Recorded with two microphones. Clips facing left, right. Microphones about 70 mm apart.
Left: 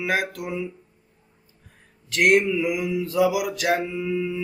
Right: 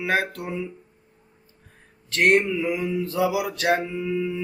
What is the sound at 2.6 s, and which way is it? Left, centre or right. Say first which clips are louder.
Mantra: even; centre.